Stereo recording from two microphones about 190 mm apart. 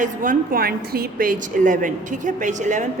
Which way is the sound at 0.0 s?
45° right (ahead or behind).